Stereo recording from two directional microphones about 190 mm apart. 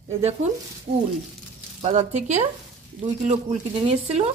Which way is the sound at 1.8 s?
35° right (ahead or behind).